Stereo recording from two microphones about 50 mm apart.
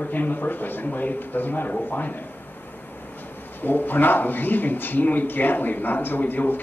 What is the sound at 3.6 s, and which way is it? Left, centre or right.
A man's voice, left.